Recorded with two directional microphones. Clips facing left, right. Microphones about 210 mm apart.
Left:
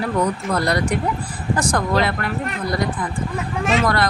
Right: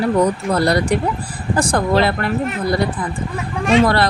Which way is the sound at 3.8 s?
30° right (ahead or behind).